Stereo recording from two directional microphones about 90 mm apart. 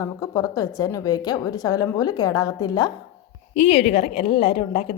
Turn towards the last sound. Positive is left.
turn(degrees=90)